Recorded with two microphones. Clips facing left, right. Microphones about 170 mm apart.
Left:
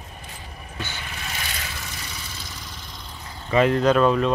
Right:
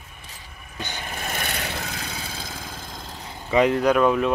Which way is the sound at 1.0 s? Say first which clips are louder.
Right 4 dB; 50° right (ahead or behind).